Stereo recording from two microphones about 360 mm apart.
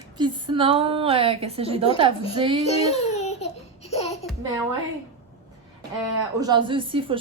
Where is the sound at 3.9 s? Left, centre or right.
Centre.